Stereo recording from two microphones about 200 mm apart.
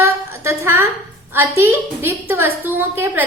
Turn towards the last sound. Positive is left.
turn(degrees=-10)  # may be behind; listen again after turning